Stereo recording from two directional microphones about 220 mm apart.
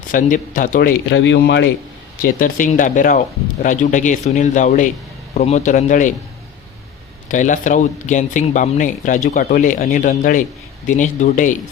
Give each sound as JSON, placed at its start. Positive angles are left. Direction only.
{"t": 0.1, "sound": "speech", "side_deg": 35}
{"t": 1.1, "sound": "speech", "side_deg": 55}
{"t": 2.2, "sound": "speech", "side_deg": 35}
{"t": 7.3, "sound": "speech", "side_deg": 35}